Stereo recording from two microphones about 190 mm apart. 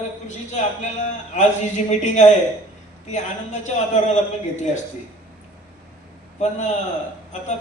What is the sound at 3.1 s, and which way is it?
A man's voice, 40° left (ahead or behind).